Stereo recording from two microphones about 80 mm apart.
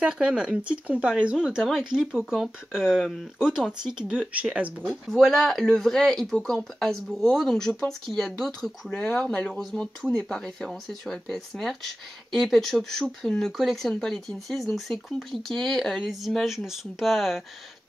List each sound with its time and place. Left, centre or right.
0.0 s speech: centre
1.6 s speech: centre
5.1 s speech: centre
8.9 s speech: centre
9.5 s speech: centre